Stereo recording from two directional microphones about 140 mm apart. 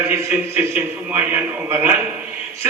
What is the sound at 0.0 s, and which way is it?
A man's voice, 20° right (ahead or behind).